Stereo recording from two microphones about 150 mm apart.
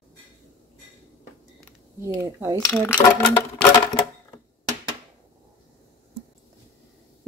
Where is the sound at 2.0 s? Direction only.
20° right (ahead or behind).